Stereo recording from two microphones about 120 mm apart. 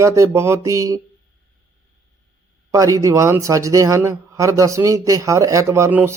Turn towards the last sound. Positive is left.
turn(degrees=-15)  # may be behind; listen again after turning